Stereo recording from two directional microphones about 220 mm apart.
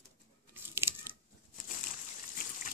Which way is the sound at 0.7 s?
10° right (ahead or behind).